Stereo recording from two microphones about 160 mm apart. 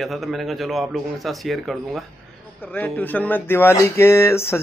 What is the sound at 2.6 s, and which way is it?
A woman's voice, 10° left (ahead or behind).